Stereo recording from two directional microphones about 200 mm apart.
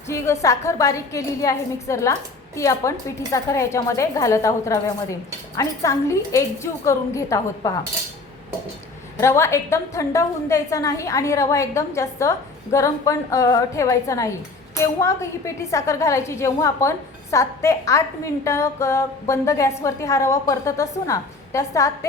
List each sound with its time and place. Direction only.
0.1 s a woman's voice: 15° left (ahead or behind)
9.2 s a woman's voice: 15° left (ahead or behind)